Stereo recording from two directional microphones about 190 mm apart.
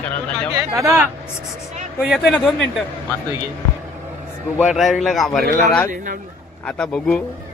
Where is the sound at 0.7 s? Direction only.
15° right (ahead or behind).